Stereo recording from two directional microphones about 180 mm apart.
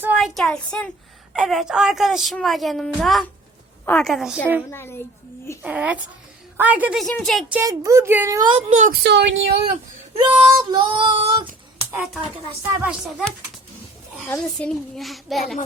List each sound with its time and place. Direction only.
0.0 s a woman's voice: 5° right (ahead or behind)
4.7 s a woman's voice: 15° left (ahead or behind)
5.6 s a woman's voice: 5° right (ahead or behind)
7.6 s speech: 20° right (ahead or behind)
8.7 s speech: 45° right (ahead or behind)
9.0 s speech: 70° right (ahead or behind)
10.2 s child singing: 25° right (ahead or behind)
12.6 s a woman's voice: 10° right (ahead or behind)
14.3 s a woman's voice: 5° left (ahead or behind)